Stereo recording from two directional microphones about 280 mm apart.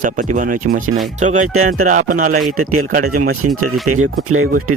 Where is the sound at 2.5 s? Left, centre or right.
Right.